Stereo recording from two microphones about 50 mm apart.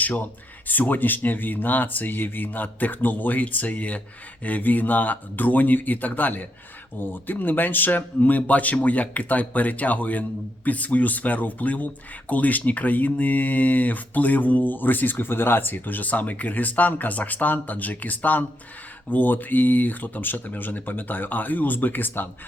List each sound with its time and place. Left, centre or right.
0.0 s speech: left